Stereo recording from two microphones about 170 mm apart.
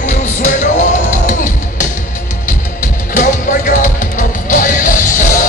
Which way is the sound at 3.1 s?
50° left (ahead or behind).